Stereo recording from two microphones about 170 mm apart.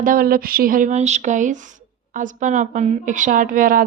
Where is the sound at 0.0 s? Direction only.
55° right (ahead or behind).